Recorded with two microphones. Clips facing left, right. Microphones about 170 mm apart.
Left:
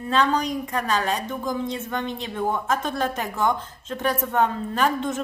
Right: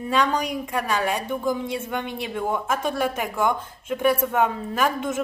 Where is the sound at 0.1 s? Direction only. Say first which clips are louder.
Left 1 dB; 10° right (ahead or behind).